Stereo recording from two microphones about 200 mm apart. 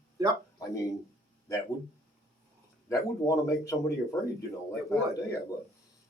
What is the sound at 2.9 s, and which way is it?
Speech, 15° left (ahead or behind).